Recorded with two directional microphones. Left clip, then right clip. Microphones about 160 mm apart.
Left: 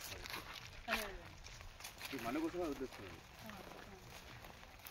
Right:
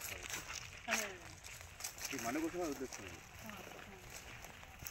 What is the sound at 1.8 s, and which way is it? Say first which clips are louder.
Speech: right 3 dB; 55° right (ahead or behind).